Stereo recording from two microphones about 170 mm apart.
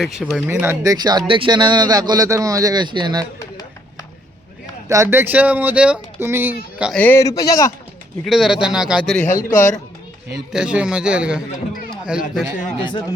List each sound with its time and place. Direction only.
0.0 s a man's voice: centre (ahead or behind)
0.4 s speech: 15° right (ahead or behind)
4.9 s speech: 15° right (ahead or behind)
6.9 s a man's voice: 10° left (ahead or behind)
8.2 s a man's voice: centre (ahead or behind)
9.2 s a man's voice: 50° left (ahead or behind)
10.3 s a man's voice: 5° right (ahead or behind)
12.8 s a man's voice: 25° left (ahead or behind)